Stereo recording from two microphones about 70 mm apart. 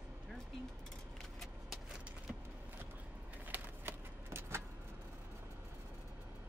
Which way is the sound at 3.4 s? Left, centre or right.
Right.